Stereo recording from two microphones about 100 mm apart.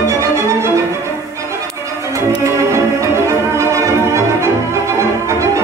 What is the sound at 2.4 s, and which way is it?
Music, 30° right (ahead or behind).